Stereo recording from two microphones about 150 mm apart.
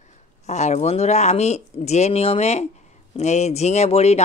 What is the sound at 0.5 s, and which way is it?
Speech, 50° left (ahead or behind).